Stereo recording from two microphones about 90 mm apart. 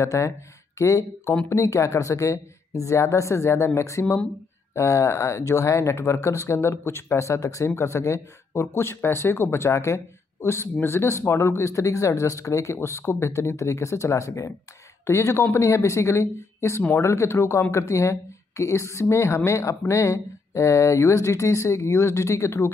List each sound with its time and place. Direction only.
0.0 s speech: 35° left (ahead or behind)